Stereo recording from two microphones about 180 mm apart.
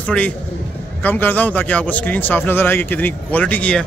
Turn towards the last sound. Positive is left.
turn(degrees=5)  # may be behind; listen again after turning